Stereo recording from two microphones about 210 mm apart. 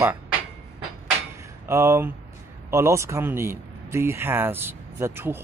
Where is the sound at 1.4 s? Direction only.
15° right (ahead or behind).